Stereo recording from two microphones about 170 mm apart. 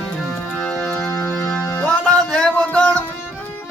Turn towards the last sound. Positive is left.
turn(degrees=5)  # may be behind; listen again after turning